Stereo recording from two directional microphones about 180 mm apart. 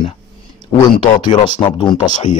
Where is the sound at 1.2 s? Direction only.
25° left (ahead or behind).